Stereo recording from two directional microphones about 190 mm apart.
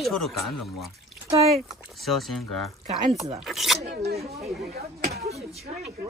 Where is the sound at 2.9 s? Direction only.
35° right (ahead or behind).